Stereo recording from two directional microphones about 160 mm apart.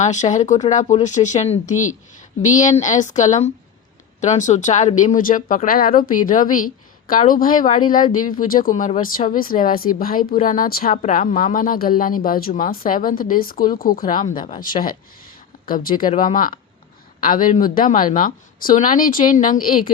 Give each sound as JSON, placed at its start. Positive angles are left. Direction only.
{"t": 0.0, "sound": "a woman's voice", "side_deg": 50}
{"t": 10.9, "sound": "a woman's voice", "side_deg": 50}